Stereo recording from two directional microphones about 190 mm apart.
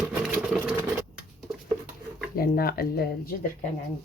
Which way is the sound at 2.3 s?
50° left (ahead or behind).